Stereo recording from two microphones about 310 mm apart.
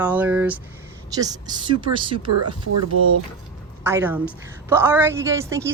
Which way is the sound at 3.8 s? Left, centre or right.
Centre.